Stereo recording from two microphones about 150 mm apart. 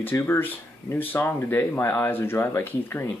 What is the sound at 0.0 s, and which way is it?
Speech, 15° left (ahead or behind).